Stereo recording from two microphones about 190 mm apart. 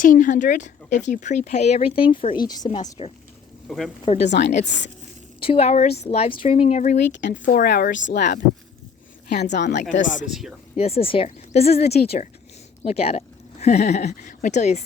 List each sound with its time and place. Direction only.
0.0 s a woman's voice: 45° left (ahead or behind)
3.7 s speech: centre (ahead or behind)
4.0 s speech: 35° left (ahead or behind)
4.3 s a woman's voice: 60° left (ahead or behind)
5.5 s speech: 35° left (ahead or behind); by 8.4 s 60° left (ahead or behind)
9.9 s speech: 40° left (ahead or behind)
10.2 s speech: centre (ahead or behind)
10.8 s speech: 30° left (ahead or behind)